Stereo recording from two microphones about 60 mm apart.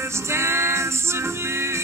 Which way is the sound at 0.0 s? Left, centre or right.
Right.